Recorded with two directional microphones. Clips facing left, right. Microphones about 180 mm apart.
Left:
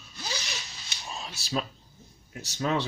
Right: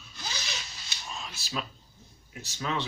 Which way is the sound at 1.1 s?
35° left (ahead or behind).